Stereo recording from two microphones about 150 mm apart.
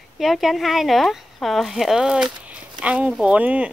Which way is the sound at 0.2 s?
Centre (ahead or behind).